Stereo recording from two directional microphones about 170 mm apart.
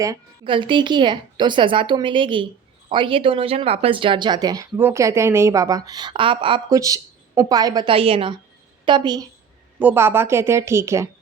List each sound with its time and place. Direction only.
0.0 s a woman's voice: 25° right (ahead or behind)
9.7 s speech: 10° right (ahead or behind)